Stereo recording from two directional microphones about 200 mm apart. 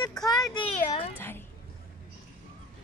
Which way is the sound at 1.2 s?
10° left (ahead or behind).